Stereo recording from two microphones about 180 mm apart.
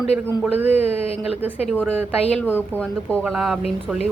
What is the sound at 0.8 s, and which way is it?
Speech, 35° left (ahead or behind).